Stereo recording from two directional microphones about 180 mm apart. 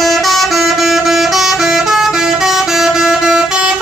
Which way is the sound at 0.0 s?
Centre (ahead or behind).